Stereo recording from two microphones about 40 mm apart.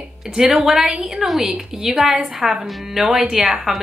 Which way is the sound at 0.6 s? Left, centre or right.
Centre.